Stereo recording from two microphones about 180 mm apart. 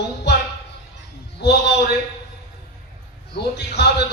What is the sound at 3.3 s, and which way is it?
Speech, 65° left (ahead or behind).